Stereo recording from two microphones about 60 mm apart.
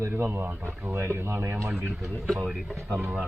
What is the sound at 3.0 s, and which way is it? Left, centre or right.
Speech, right.